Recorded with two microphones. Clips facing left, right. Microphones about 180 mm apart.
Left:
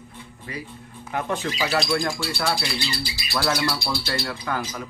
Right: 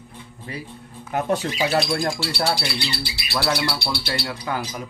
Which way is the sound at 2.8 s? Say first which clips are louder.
Right 1 dB; 65° right (ahead or behind).